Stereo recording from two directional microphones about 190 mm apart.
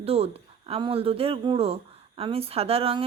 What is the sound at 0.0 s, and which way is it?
Speech, 30° right (ahead or behind).